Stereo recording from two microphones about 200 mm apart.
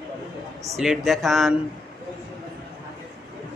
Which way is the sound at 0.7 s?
Centre (ahead or behind).